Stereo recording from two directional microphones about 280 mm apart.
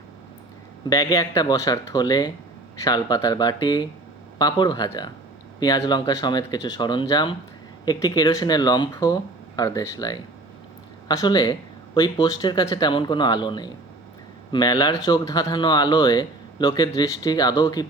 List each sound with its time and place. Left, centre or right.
0.9 s speech: centre